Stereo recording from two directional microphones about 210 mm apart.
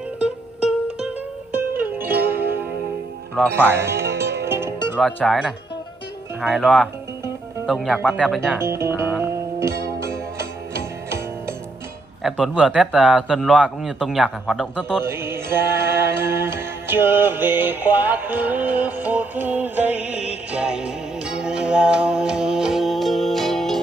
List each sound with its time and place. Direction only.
0.2 s music: 5° right (ahead or behind)
4.0 s music: 50° right (ahead or behind)
4.5 s music: 10° right (ahead or behind)
4.9 s speech: centre (ahead or behind)
8.5 s music: 10° right (ahead or behind)
10.7 s music: 15° right (ahead or behind)
12.2 s speech: centre (ahead or behind)
15.0 s music: 10° right (ahead or behind)